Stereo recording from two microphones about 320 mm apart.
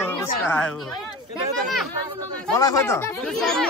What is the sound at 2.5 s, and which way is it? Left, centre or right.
Speech, centre.